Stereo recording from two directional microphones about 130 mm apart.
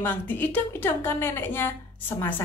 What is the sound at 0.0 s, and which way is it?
A woman's voice, 15° left (ahead or behind).